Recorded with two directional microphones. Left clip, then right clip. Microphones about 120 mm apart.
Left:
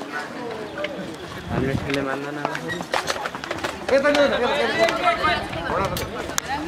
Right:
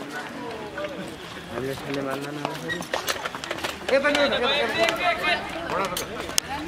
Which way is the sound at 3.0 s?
5° right (ahead or behind).